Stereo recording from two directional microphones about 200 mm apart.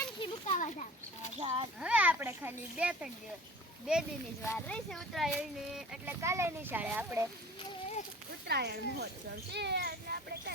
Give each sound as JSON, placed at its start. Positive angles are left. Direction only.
{"t": 0.2, "sound": "children playing", "side_deg": 35}
{"t": 1.4, "sound": "a child's voice", "side_deg": -30}
{"t": 1.8, "sound": "a child's voice", "side_deg": -5}
{"t": 4.4, "sound": "speech", "side_deg": 5}
{"t": 6.2, "sound": "a child's voice", "side_deg": -15}
{"t": 8.4, "sound": "speech", "side_deg": -55}